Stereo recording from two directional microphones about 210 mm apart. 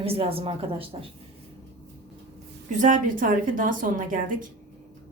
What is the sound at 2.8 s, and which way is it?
A woman's voice, 40° right (ahead or behind).